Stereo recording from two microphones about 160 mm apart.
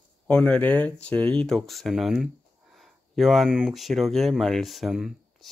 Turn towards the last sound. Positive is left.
turn(degrees=0)  # may be behind; listen again after turning